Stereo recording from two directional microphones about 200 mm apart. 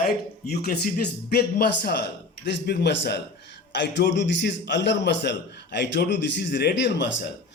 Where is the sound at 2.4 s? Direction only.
55° left (ahead or behind).